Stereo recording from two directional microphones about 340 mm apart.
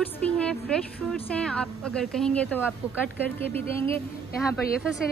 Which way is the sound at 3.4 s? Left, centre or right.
Centre.